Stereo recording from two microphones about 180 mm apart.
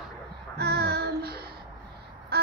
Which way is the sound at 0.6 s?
65° right (ahead or behind).